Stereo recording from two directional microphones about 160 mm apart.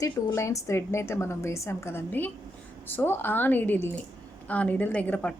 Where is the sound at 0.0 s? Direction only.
20° left (ahead or behind).